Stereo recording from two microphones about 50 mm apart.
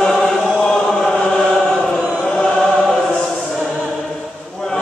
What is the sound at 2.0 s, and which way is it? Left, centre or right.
Choir, right.